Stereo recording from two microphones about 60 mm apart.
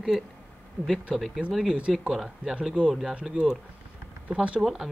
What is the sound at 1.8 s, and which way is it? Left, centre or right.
Speech, centre.